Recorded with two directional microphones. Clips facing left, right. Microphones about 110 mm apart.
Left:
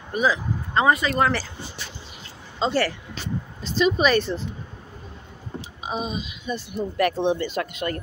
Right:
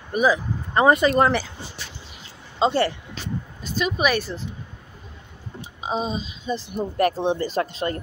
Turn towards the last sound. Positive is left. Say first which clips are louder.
# right 2 dB
turn(degrees=-30)  # may be behind; listen again after turning